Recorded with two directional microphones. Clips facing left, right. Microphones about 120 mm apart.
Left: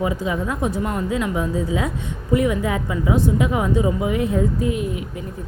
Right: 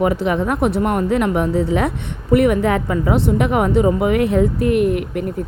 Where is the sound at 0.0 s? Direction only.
70° right (ahead or behind).